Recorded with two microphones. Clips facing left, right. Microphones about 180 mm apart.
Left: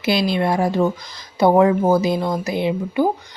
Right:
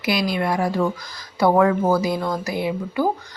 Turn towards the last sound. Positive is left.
turn(degrees=20)  # may be behind; listen again after turning